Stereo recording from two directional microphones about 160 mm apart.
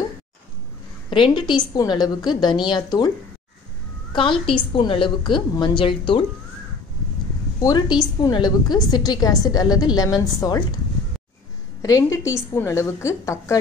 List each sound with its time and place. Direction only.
1.1 s a woman's voice: 30° left (ahead or behind)
4.1 s a woman's voice: 30° left (ahead or behind)
7.6 s a woman's voice: 25° left (ahead or behind)
11.8 s a woman's voice: 20° left (ahead or behind)